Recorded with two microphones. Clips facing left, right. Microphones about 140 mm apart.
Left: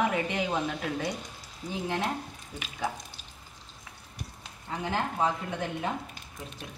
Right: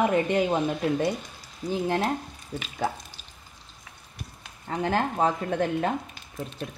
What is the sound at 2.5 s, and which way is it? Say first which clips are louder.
Speech: right 7 dB; 40° right (ahead or behind).